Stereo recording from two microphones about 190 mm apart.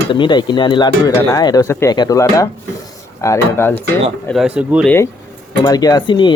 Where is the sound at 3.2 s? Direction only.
15° left (ahead or behind).